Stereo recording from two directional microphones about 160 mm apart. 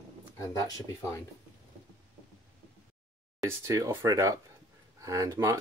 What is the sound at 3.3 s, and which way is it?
Speech, 20° right (ahead or behind).